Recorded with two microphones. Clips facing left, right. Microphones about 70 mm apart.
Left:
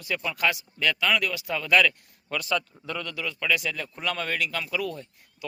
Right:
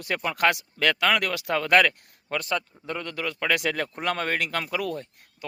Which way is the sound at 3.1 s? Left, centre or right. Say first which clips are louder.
Right 3 dB; right.